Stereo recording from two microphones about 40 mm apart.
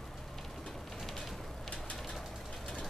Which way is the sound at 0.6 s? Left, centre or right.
Centre.